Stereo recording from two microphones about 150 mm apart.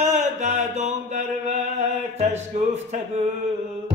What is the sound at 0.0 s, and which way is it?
Mantra, 50° right (ahead or behind).